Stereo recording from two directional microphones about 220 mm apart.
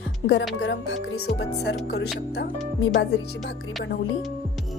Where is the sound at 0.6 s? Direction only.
50° left (ahead or behind).